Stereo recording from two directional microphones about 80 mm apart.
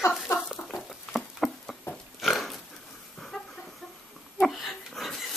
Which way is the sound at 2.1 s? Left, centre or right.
Centre.